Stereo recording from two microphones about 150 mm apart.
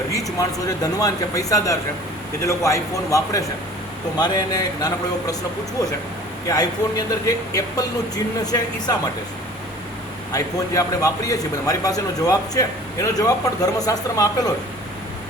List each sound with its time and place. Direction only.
0.1 s a man's voice: 20° left (ahead or behind)
6.5 s a man's voice: 25° left (ahead or behind)
10.3 s a man's voice: 25° left (ahead or behind)